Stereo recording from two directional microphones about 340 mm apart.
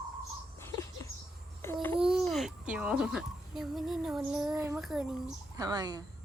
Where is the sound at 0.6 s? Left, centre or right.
Centre.